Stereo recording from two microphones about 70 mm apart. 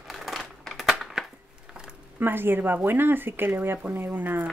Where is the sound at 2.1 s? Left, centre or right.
Right.